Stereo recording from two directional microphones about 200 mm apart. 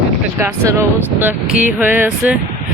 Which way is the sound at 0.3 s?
15° right (ahead or behind).